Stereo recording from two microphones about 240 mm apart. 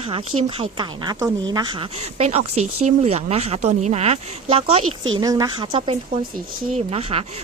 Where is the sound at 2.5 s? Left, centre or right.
Right.